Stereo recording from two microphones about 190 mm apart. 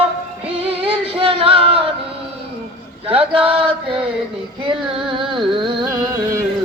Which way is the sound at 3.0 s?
30° right (ahead or behind).